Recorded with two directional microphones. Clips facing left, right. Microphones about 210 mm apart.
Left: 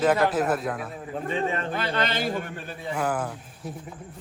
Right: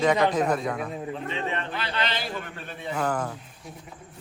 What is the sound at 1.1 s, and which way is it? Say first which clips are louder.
A man's voice: left 8 dB; 45° left (ahead or behind).